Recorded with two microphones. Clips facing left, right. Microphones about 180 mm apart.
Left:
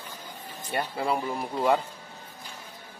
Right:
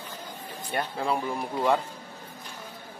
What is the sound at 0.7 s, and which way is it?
Speech, 5° left (ahead or behind).